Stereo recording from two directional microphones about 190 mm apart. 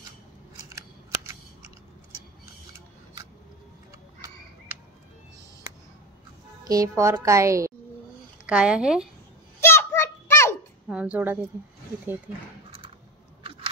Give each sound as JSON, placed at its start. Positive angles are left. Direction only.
{"t": 0.7, "sound": "scissors", "side_deg": -15}
{"t": 6.7, "sound": "speech", "side_deg": -15}
{"t": 8.5, "sound": "a woman's voice", "side_deg": -5}
{"t": 9.6, "sound": "children playing", "side_deg": 10}
{"t": 10.9, "sound": "speech", "side_deg": -5}
{"t": 13.4, "sound": "a sound", "side_deg": -30}